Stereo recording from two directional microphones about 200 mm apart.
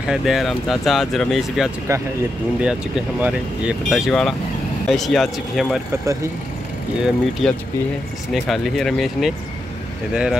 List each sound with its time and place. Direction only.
0.1 s speech: centre (ahead or behind)
1.9 s speech: 15° right (ahead or behind); by 5.8 s centre (ahead or behind)
7.0 s speech: centre (ahead or behind)